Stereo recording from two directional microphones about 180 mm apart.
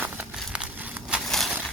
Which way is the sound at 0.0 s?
5° right (ahead or behind).